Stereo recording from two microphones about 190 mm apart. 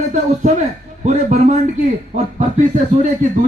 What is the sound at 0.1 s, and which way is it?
A man's voice, 40° right (ahead or behind).